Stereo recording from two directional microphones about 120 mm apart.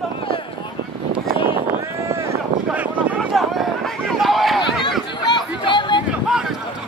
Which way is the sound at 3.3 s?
Centre (ahead or behind).